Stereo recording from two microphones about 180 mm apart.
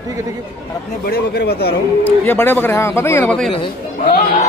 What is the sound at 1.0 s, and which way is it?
Speech, 60° left (ahead or behind).